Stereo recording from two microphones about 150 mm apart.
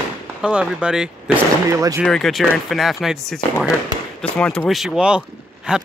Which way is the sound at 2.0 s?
Centre (ahead or behind).